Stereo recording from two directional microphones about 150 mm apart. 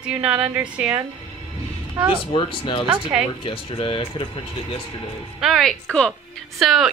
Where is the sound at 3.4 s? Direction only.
40° left (ahead or behind).